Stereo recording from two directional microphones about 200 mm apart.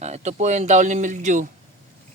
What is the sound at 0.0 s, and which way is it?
Speech, 35° right (ahead or behind).